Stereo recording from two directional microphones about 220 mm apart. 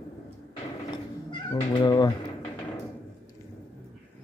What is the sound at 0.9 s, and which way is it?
Cat, 20° left (ahead or behind).